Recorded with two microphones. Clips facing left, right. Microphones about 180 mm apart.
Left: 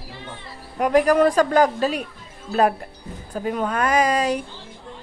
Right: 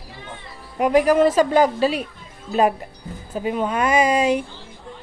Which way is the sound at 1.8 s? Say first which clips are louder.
Right 2 dB; 45° left (ahead or behind).